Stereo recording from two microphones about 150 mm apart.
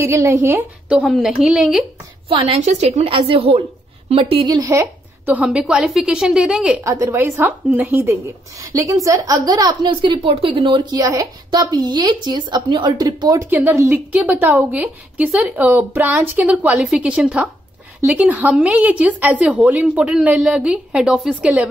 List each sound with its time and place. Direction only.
0.0 s a woman's voice: 20° right (ahead or behind)
2.2 s a woman's voice: 40° right (ahead or behind); by 6.8 s 5° right (ahead or behind)
6.8 s a woman's voice: 20° right (ahead or behind)